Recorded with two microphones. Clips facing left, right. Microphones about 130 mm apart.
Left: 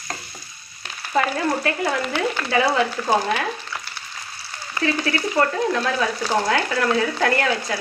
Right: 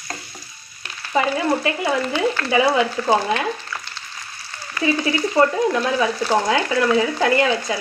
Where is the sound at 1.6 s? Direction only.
10° right (ahead or behind).